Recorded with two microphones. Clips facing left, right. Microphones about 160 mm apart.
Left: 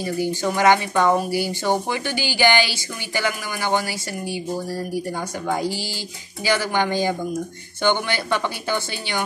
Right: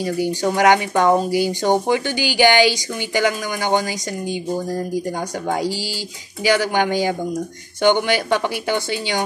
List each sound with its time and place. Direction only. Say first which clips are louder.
0.0 s speech: right 3 dB; 15° right (ahead or behind)
6.4 s speech: right 4 dB; 15° right (ahead or behind)